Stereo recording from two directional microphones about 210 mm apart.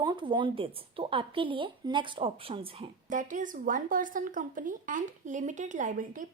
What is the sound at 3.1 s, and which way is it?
A woman's voice, 40° right (ahead or behind).